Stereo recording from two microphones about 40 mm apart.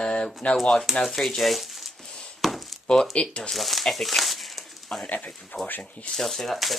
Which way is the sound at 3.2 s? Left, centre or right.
Left.